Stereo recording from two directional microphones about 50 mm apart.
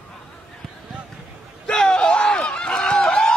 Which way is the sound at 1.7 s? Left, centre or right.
Centre.